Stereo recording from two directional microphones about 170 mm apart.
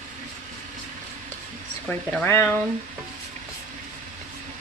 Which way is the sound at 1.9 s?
10° left (ahead or behind).